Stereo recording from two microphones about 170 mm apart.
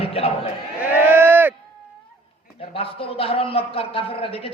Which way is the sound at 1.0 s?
10° right (ahead or behind).